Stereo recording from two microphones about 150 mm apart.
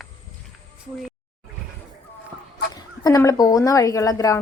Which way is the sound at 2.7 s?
25° left (ahead or behind).